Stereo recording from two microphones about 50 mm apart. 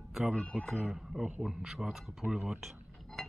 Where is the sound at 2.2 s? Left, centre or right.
Centre.